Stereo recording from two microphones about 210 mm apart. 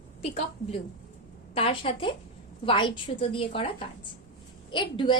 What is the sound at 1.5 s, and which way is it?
A woman's voice, 25° left (ahead or behind).